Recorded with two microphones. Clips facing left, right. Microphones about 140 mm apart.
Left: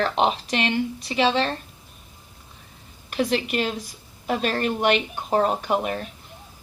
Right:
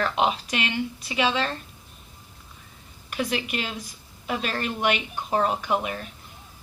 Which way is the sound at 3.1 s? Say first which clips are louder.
Left 4 dB; 40° left (ahead or behind).